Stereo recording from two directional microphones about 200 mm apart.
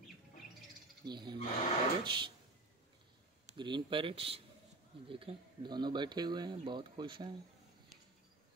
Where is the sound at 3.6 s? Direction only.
25° right (ahead or behind).